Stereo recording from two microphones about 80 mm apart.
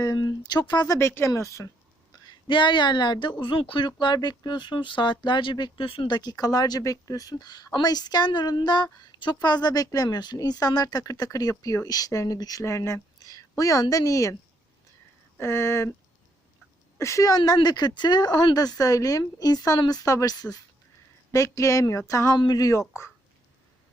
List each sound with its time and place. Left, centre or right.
0.0 s speech: left
0.9 s speech: left
2.5 s a woman's voice: left
4.0 s a woman's voice: left
12.6 s speech: left
15.4 s speech: left
17.0 s speech: left
20.1 s speech: left